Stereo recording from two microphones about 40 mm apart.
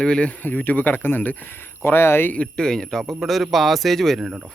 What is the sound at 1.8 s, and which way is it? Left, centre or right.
Speech, left.